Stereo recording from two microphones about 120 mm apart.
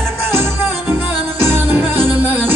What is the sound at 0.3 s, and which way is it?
Music, 20° right (ahead or behind).